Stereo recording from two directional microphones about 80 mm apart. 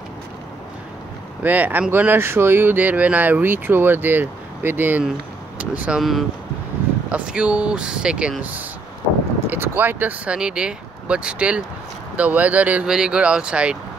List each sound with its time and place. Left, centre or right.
1.4 s speech: right
5.9 s speech: centre
7.1 s speech: centre
12.8 s speech: centre